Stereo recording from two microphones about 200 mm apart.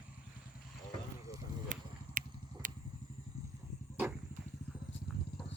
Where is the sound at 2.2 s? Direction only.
45° right (ahead or behind).